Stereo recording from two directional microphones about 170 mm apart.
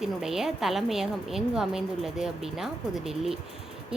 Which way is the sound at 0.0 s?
5° right (ahead or behind).